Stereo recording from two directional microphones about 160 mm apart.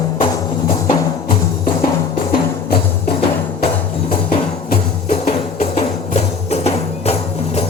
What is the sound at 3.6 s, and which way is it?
Music, 40° left (ahead or behind).